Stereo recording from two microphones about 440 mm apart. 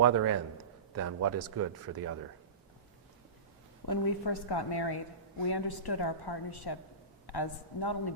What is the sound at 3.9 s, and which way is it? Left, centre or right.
A woman's voice, left.